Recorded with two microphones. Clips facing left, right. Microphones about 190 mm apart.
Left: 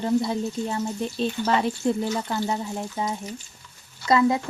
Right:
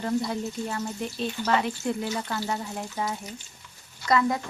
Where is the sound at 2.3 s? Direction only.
20° left (ahead or behind).